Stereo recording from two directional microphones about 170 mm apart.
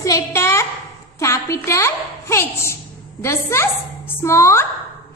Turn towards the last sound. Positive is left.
turn(degrees=15)  # may be behind; listen again after turning